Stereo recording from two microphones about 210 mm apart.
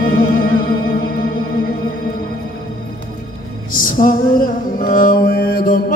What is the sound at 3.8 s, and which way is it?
Music, 40° left (ahead or behind).